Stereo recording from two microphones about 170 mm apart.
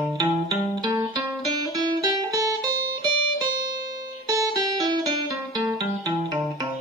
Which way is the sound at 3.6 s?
25° right (ahead or behind).